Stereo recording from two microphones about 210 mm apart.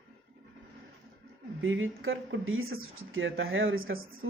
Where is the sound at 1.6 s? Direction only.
70° right (ahead or behind).